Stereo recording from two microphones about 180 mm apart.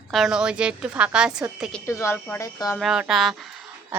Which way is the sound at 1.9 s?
15° left (ahead or behind).